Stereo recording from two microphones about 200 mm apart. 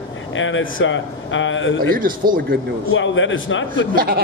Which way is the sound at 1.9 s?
45° right (ahead or behind).